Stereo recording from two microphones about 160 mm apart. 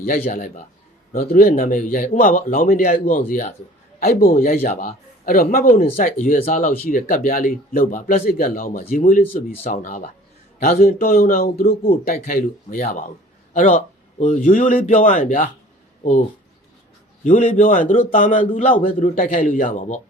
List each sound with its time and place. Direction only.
0.3 s speech: 55° left (ahead or behind)
4.0 s a man's voice: 70° left (ahead or behind)
4.6 s a man's voice: 50° left (ahead or behind)
17.2 s speech: 50° left (ahead or behind)